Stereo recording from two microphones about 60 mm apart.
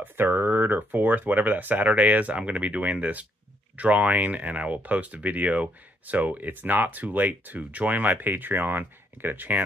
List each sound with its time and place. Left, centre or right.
0.0 s speech: right